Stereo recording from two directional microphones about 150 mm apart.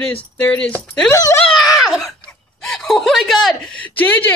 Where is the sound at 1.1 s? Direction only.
20° left (ahead or behind).